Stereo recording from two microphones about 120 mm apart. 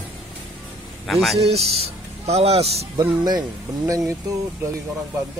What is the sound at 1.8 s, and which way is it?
Speech, 60° right (ahead or behind).